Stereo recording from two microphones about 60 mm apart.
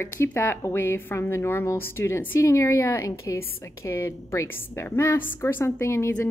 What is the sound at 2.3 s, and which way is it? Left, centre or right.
A woman's voice, left.